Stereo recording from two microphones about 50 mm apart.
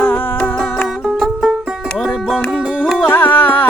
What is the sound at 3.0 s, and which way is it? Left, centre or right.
Carnatic music, left.